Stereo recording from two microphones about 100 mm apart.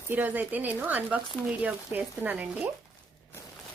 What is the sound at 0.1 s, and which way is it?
Speech, 20° right (ahead or behind).